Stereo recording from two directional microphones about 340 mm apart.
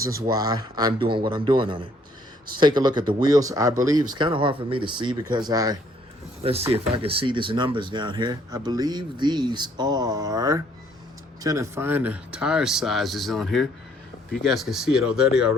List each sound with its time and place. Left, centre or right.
0.0 s speech: centre